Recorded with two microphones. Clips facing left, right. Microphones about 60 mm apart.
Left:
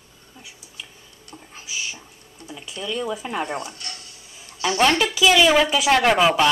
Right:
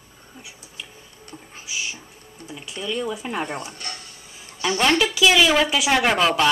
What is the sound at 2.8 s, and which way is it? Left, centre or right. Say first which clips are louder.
Speech: even; centre.